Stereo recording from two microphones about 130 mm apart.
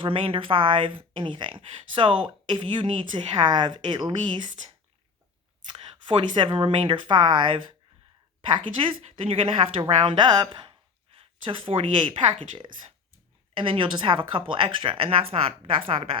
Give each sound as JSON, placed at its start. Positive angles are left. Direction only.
{"t": 0.0, "sound": "speech", "side_deg": -40}
{"t": 5.7, "sound": "speech", "side_deg": -40}